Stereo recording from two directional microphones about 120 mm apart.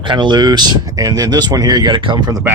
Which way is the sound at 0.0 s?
40° right (ahead or behind).